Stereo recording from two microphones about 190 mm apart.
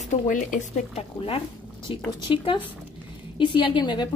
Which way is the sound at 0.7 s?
30° left (ahead or behind).